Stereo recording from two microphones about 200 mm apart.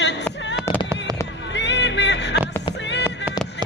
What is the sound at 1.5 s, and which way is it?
Music, 60° left (ahead or behind).